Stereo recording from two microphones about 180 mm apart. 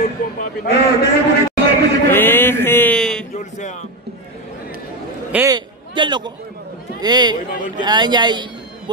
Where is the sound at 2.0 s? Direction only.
10° left (ahead or behind).